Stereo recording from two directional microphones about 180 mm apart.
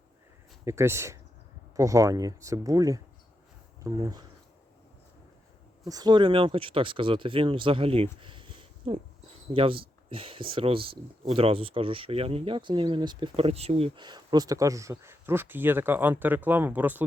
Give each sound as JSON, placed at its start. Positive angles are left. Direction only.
{"t": 0.6, "sound": "speech", "side_deg": -15}
{"t": 5.8, "sound": "speech", "side_deg": -20}